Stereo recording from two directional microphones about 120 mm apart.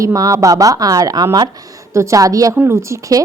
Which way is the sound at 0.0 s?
30° right (ahead or behind).